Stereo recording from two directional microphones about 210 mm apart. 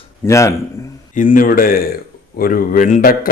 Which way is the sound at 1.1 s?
40° left (ahead or behind).